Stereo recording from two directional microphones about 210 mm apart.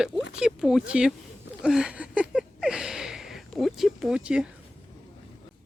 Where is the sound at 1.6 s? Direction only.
Centre (ahead or behind).